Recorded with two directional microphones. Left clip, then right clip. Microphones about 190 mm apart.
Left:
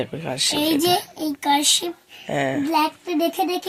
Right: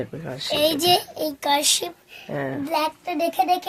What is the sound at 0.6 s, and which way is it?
A child's voice, 75° right (ahead or behind).